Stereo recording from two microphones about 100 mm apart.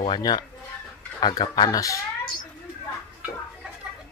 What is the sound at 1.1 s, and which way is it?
Speech, 45° left (ahead or behind).